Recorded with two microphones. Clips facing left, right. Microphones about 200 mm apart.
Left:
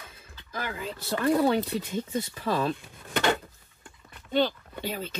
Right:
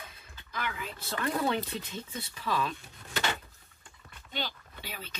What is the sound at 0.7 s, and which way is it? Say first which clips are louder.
Speech: left 6 dB; 30° left (ahead or behind).